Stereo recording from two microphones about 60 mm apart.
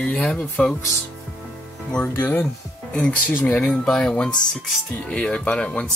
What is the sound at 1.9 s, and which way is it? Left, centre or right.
Speech, left.